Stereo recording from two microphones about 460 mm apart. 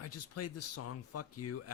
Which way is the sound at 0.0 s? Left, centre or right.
Left.